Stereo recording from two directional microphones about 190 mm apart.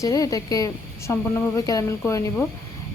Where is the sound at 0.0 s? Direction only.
20° left (ahead or behind).